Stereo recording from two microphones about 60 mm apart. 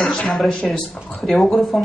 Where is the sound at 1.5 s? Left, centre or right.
Centre.